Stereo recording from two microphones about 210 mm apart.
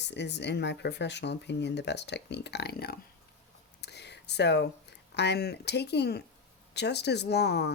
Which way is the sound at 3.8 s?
55° left (ahead or behind).